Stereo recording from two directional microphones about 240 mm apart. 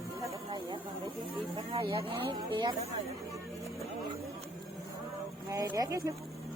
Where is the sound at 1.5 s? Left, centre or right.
Right.